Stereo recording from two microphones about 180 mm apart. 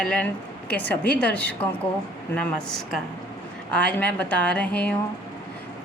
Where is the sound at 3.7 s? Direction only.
5° left (ahead or behind).